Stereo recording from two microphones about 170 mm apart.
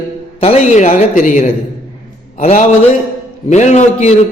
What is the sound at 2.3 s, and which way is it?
A man's voice, 35° left (ahead or behind).